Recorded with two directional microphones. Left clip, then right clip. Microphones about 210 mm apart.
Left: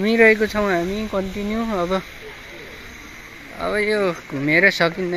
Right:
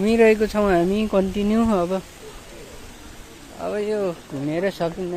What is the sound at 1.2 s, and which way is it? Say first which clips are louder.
Speech: right 3 dB; 60° right (ahead or behind).